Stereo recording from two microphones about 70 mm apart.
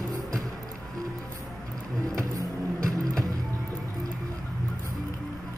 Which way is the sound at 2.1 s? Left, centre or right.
Right.